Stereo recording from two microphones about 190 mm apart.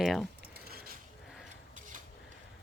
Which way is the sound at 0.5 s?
55° right (ahead or behind).